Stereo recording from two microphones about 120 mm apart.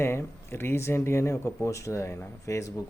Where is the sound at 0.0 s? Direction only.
20° left (ahead or behind).